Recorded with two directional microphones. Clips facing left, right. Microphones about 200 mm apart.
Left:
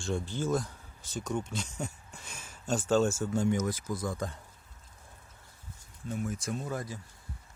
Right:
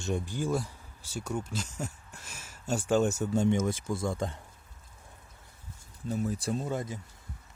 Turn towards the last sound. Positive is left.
turn(degrees=-25)  # may be behind; listen again after turning